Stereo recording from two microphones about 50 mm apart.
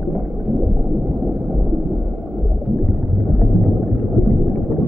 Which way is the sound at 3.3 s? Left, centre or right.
Centre.